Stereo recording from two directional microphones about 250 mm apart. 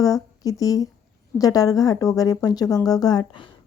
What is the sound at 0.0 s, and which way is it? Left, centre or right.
A woman's voice, centre.